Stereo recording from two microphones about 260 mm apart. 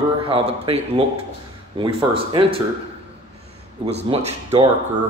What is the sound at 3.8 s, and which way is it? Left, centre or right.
Speech, right.